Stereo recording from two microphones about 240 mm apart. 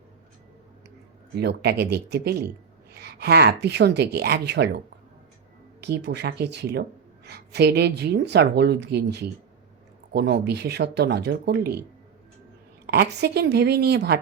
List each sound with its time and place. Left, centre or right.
1.4 s speech: right
5.8 s speech: right
12.8 s speech: right